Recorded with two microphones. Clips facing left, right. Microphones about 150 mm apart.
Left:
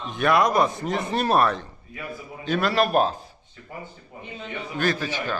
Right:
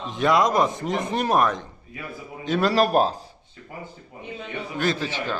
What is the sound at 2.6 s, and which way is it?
Speech, 35° right (ahead or behind).